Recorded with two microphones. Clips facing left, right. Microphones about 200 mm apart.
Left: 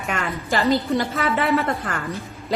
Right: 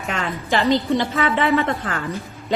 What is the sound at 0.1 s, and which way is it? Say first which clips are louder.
A woman's voice: right 2 dB; centre (ahead or behind).